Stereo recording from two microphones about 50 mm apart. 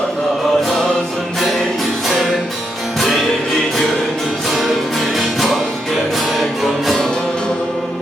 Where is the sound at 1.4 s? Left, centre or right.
Centre.